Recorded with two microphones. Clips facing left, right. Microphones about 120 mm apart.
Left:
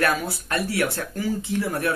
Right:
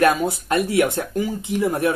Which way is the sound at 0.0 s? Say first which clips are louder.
Right 6 dB; 20° right (ahead or behind).